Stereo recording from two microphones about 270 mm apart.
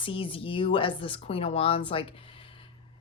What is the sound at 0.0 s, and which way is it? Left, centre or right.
Speech, centre.